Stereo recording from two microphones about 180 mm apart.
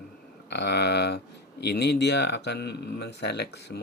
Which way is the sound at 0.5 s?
70° left (ahead or behind).